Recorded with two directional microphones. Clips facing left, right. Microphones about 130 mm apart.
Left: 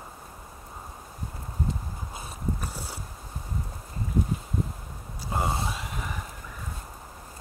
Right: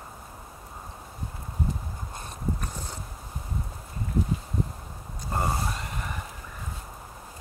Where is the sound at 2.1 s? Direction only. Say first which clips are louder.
Right 1 dB; 5° left (ahead or behind).